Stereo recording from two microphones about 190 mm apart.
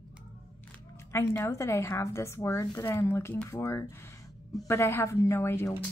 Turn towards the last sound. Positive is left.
turn(degrees=15)  # may be behind; listen again after turning